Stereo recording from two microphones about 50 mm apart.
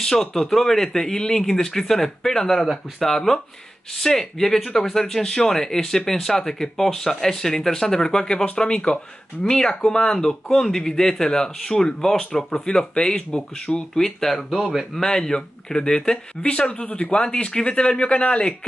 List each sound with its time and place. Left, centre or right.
0.0 s speech: centre
14.5 s speech: centre
15.0 s speech: centre